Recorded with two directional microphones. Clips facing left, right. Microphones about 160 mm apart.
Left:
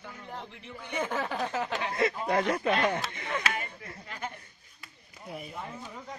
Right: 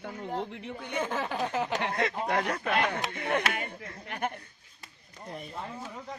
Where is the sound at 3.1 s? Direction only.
60° right (ahead or behind).